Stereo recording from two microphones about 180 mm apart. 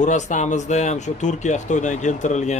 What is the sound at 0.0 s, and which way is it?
Speech, 40° left (ahead or behind).